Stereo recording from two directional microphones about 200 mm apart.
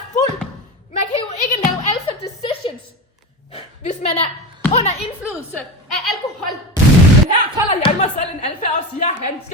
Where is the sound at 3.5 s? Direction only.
35° left (ahead or behind).